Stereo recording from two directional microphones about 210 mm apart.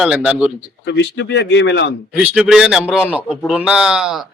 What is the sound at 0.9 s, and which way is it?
Speech, 55° left (ahead or behind).